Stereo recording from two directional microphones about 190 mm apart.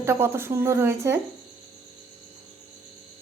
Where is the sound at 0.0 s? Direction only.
15° right (ahead or behind).